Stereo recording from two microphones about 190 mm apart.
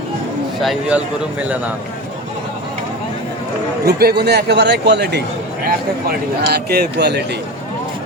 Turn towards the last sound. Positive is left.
turn(degrees=-60)  # may be behind; listen again after turning